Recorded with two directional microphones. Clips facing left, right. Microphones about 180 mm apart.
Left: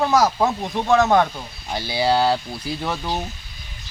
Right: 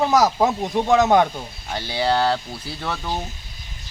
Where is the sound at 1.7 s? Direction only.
10° left (ahead or behind).